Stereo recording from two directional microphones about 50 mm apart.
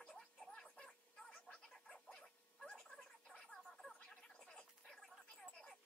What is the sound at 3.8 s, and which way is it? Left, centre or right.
Gargling, centre.